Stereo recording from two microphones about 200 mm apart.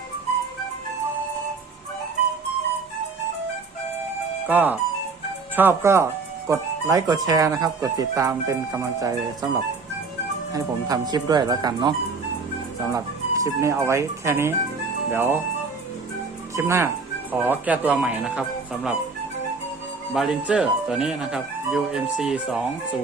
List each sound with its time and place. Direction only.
4.4 s speech: 10° right (ahead or behind)
10.5 s speech: 20° right (ahead or behind)
16.6 s speech: 15° right (ahead or behind)
20.1 s speech: 5° right (ahead or behind)